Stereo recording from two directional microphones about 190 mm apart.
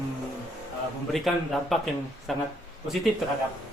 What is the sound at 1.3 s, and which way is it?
Speech, centre (ahead or behind).